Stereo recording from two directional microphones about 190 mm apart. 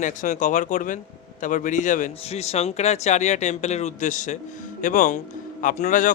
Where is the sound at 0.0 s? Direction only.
40° left (ahead or behind).